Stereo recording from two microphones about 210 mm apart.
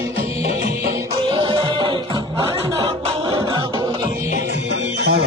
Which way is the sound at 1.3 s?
25° right (ahead or behind).